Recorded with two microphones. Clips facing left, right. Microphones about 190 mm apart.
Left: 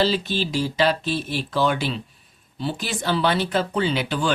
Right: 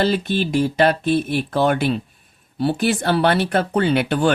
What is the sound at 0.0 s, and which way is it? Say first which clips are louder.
Speech: right 3 dB; 55° right (ahead or behind).